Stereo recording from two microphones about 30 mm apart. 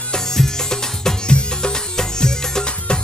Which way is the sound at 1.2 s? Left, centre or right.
Left.